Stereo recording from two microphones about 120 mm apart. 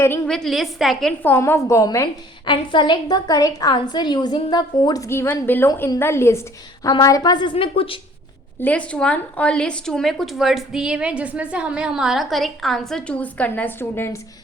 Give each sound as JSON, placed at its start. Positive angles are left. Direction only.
{"t": 0.3, "sound": "a woman's voice", "side_deg": 5}
{"t": 1.2, "sound": "a woman's voice", "side_deg": 15}
{"t": 2.5, "sound": "a woman's voice", "side_deg": 40}
{"t": 5.0, "sound": "a woman's voice", "side_deg": 20}
{"t": 7.5, "sound": "a woman's voice", "side_deg": 50}
{"t": 8.6, "sound": "a woman's voice", "side_deg": 10}